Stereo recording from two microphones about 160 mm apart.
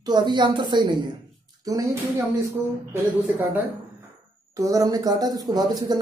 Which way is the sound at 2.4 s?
15° right (ahead or behind).